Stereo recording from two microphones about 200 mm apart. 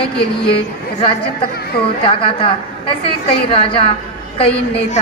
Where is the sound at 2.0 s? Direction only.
25° left (ahead or behind).